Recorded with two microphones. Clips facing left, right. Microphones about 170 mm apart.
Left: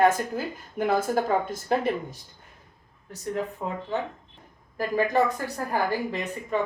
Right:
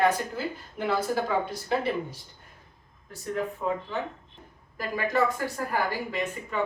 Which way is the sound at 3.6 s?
40° left (ahead or behind).